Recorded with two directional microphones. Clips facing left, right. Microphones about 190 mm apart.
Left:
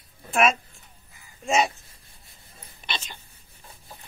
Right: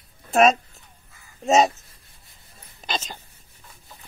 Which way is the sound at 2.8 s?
40° right (ahead or behind).